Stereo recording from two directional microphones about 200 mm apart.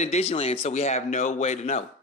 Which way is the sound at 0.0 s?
30° left (ahead or behind).